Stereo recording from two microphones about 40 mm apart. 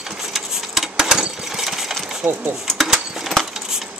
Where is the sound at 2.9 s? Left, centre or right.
Centre.